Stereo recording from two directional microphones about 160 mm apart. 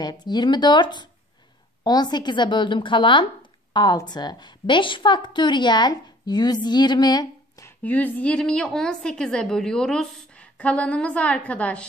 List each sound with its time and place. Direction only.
0.0 s a woman's voice: 25° left (ahead or behind)
7.8 s a woman's voice: 10° left (ahead or behind)